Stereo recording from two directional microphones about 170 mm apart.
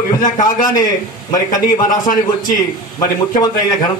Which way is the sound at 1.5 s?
50° left (ahead or behind).